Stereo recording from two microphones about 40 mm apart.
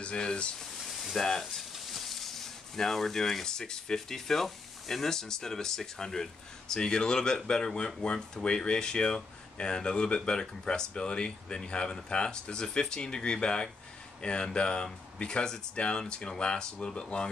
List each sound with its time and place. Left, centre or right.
0.0 s speech: left
1.9 s speech: centre; by 17.3 s left